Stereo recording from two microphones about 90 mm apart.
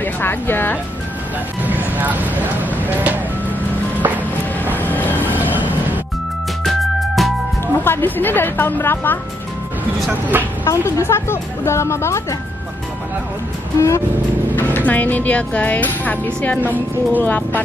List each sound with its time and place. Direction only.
0.0 s speech: 25° left (ahead or behind)
1.6 s speech: 20° right (ahead or behind)
4.7 s train: 20° left (ahead or behind)
6.6 s music: centre (ahead or behind)
7.6 s a woman's voice: 25° left (ahead or behind)
10.6 s speech: 30° left (ahead or behind)
13.7 s speech: 35° left (ahead or behind)
14.5 s a woman's voice: 20° left (ahead or behind)
16.6 s speech: 20° right (ahead or behind)
17.2 s a woman's voice: 20° left (ahead or behind)